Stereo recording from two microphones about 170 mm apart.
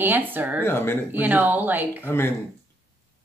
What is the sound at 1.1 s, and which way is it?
Speech, 10° right (ahead or behind).